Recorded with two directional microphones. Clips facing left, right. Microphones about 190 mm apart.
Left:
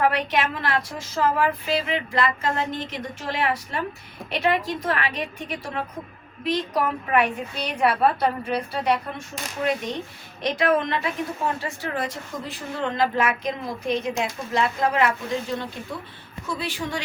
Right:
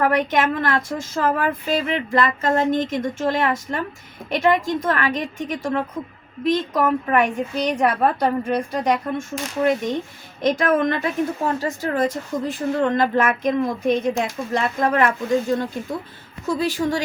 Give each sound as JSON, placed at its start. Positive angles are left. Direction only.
{"t": 0.0, "sound": "a woman's voice", "side_deg": -45}